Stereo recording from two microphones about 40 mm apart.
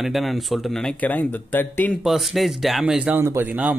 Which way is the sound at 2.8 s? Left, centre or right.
Right.